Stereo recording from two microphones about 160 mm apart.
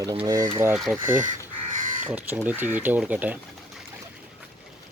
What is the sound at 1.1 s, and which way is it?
Crow, 55° right (ahead or behind).